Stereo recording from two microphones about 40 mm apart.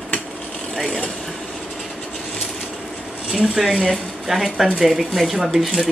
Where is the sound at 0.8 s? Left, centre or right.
Centre.